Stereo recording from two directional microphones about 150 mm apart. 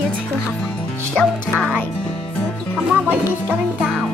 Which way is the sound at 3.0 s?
10° right (ahead or behind).